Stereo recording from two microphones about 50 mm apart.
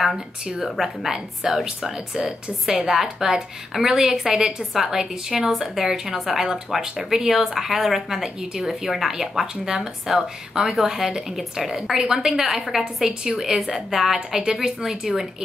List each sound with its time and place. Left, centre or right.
0.8 s a woman's voice: centre
1.9 s a woman's voice: centre